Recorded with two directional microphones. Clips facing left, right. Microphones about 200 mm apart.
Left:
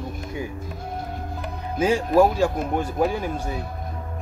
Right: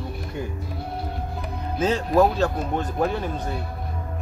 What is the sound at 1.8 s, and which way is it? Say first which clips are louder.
Speech: left 2 dB; 10° left (ahead or behind).